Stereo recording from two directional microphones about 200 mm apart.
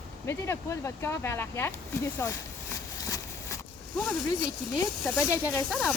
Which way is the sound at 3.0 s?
15° left (ahead or behind).